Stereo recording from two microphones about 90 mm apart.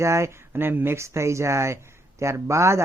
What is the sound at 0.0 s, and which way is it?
Speech, 30° right (ahead or behind).